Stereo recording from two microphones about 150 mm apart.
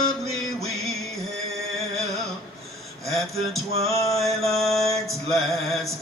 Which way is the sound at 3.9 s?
20° left (ahead or behind).